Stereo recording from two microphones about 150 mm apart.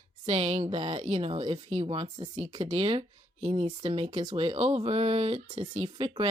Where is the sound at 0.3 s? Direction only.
40° right (ahead or behind).